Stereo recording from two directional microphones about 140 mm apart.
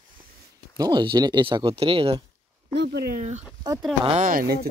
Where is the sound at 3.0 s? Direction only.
85° right.